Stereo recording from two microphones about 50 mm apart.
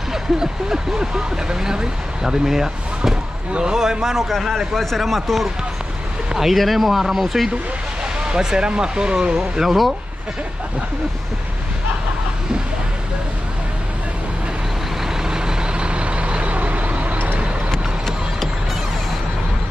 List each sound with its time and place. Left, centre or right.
0.1 s speech: centre
4.3 s speech: centre
8.2 s speech: centre
9.7 s speech: centre
15.2 s vehicle: centre
17.6 s music: centre